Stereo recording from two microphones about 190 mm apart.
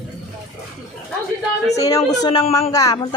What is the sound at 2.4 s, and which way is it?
Speech, 35° left (ahead or behind).